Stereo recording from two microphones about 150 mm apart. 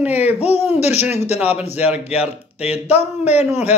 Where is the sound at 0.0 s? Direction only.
10° right (ahead or behind).